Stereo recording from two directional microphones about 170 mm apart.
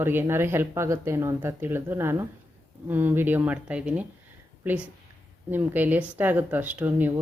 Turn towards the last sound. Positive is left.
turn(degrees=-10)  # may be behind; listen again after turning